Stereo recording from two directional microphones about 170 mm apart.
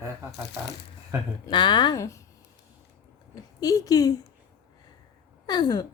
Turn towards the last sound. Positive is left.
turn(degrees=25)  # may be behind; listen again after turning